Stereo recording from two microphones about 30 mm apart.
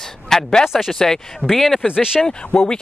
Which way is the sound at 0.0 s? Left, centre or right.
Centre.